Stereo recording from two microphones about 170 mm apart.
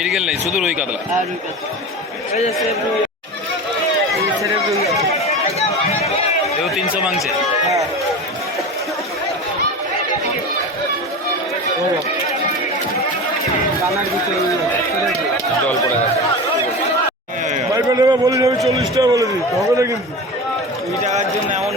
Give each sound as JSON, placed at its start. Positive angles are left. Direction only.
{"t": 0.0, "sound": "speech", "side_deg": -5}
{"t": 6.7, "sound": "speech", "side_deg": -5}
{"t": 17.7, "sound": "a man's voice", "side_deg": -20}
{"t": 21.0, "sound": "a sound", "side_deg": -45}